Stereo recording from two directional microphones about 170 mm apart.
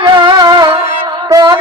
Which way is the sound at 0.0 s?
25° right (ahead or behind).